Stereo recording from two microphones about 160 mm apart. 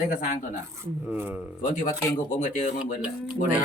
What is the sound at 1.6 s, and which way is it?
Speech, 55° left (ahead or behind).